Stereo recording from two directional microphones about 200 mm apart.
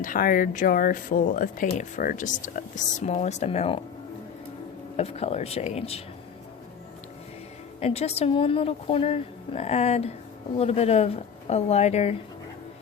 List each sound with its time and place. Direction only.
0.0 s speech: 45° left (ahead or behind)
4.9 s speech: 30° left (ahead or behind)
7.8 s speech: 30° left (ahead or behind)